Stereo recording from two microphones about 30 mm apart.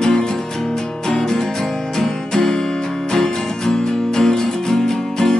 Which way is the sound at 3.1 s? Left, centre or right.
Centre.